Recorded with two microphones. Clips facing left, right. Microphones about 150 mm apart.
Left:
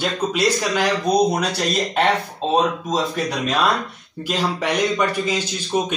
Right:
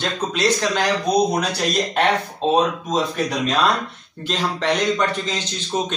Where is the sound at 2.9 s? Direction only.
Centre (ahead or behind).